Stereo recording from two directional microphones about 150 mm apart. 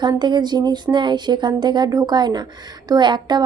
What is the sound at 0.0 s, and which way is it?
A woman's voice, 30° right (ahead or behind).